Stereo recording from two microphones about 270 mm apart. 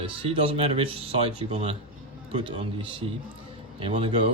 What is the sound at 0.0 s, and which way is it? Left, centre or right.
Speech, centre.